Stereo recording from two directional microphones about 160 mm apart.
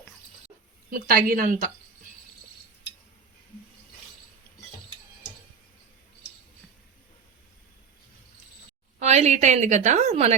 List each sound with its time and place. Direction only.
0.9 s a woman's voice: 60° right (ahead or behind)
9.0 s a woman's voice: 45° right (ahead or behind)